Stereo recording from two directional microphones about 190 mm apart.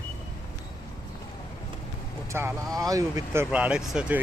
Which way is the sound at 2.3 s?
15° right (ahead or behind).